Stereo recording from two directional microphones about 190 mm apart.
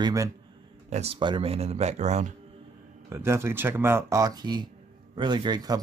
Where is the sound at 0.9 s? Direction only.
30° right (ahead or behind).